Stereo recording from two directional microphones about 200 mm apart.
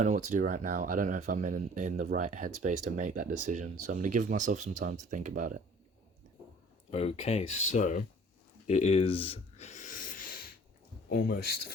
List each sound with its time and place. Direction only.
0.0 s speech: 35° right (ahead or behind)
6.9 s speech: 30° left (ahead or behind)
8.6 s a sound: 35° left (ahead or behind)
11.1 s speech: 50° left (ahead or behind)